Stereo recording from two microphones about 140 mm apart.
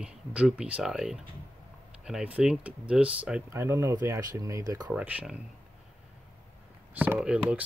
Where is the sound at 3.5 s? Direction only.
20° right (ahead or behind).